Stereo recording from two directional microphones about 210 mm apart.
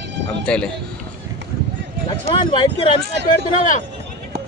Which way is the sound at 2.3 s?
25° left (ahead or behind).